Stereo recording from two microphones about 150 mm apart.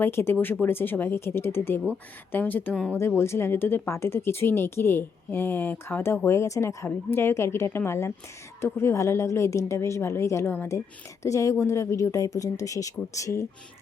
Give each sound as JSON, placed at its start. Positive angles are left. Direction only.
{"t": 0.0, "sound": "speech", "side_deg": 15}